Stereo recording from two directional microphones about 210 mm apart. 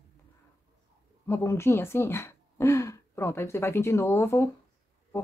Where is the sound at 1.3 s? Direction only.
10° left (ahead or behind).